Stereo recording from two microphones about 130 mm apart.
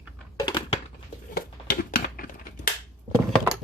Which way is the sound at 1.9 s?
90° left.